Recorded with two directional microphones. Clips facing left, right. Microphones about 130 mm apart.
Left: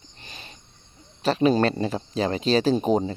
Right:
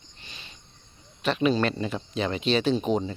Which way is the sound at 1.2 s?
35° left (ahead or behind).